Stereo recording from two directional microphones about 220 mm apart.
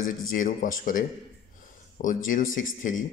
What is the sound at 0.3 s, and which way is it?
Speech, 40° left (ahead or behind).